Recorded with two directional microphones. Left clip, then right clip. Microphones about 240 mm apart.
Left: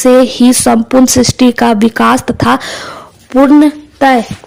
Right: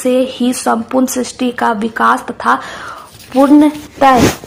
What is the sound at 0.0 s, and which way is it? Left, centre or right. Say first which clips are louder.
Speech: left 7 dB; left.